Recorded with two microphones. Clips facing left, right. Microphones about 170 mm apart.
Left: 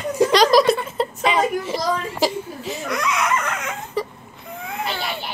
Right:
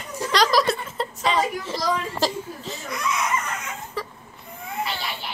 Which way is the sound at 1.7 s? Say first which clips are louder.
Left 2 dB; 10° left (ahead or behind).